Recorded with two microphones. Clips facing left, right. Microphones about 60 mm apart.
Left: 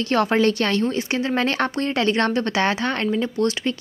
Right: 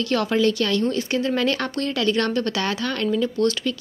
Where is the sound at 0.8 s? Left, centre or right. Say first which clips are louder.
Even; left.